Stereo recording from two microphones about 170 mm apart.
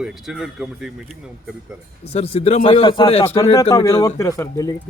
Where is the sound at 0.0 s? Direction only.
5° right (ahead or behind).